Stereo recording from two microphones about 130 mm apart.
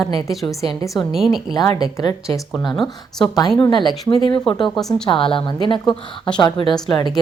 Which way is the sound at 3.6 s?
35° left (ahead or behind).